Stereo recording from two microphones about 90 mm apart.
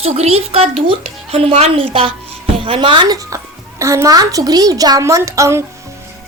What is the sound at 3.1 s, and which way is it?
A child's voice, 40° right (ahead or behind).